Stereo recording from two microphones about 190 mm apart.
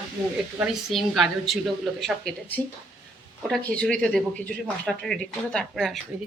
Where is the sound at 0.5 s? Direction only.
Centre (ahead or behind).